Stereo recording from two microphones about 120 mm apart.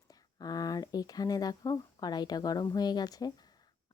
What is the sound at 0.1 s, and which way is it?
Speech, 30° left (ahead or behind).